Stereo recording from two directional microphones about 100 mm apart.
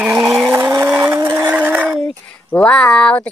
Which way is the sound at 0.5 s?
25° right (ahead or behind).